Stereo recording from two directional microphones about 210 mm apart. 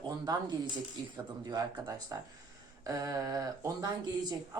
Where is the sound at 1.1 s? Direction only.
20° right (ahead or behind).